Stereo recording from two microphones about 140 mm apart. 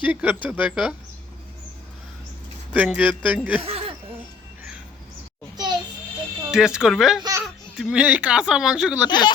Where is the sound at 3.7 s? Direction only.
45° right (ahead or behind).